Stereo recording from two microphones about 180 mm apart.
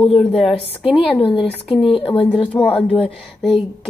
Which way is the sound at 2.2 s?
5° left (ahead or behind).